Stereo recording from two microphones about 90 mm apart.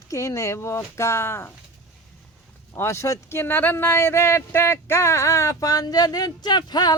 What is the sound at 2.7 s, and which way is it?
Speech, 30° left (ahead or behind).